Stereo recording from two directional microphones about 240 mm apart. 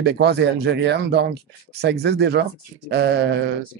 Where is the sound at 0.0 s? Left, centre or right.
Right.